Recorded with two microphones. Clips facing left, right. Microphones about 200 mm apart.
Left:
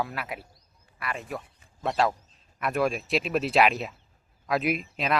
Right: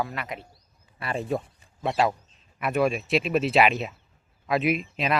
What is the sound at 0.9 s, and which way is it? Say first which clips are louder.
Speech: right 6 dB; 30° right (ahead or behind).